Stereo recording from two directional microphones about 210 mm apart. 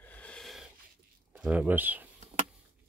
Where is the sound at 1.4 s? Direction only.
5° right (ahead or behind).